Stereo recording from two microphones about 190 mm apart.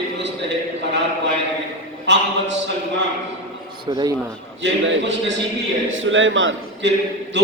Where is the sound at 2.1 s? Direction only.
70° right (ahead or behind).